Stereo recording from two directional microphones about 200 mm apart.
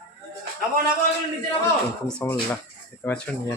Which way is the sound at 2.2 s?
10° left (ahead or behind).